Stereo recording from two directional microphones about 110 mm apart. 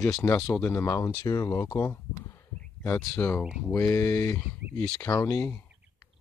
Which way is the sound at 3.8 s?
25° left (ahead or behind).